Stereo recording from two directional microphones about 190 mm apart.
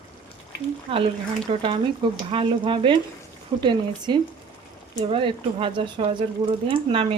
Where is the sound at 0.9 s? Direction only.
30° right (ahead or behind).